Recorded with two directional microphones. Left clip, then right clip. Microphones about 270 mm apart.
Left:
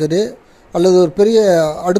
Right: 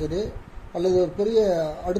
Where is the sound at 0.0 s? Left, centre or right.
Left.